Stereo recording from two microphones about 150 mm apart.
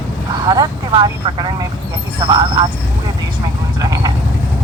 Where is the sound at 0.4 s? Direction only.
30° right (ahead or behind).